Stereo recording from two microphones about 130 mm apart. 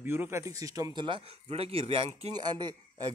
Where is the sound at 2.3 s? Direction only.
35° right (ahead or behind).